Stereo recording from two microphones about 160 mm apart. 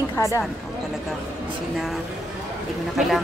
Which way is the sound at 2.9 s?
Centre (ahead or behind).